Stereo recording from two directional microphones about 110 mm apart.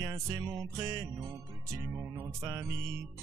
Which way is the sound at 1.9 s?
15° right (ahead or behind).